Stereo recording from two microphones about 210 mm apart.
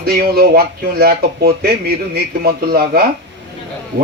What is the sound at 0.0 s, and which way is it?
Speech, 45° right (ahead or behind).